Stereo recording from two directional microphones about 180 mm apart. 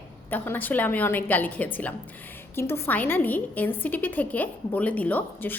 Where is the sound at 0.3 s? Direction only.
10° left (ahead or behind).